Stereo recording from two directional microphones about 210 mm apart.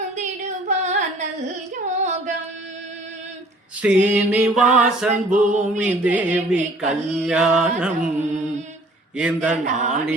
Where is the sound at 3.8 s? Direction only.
5° right (ahead or behind).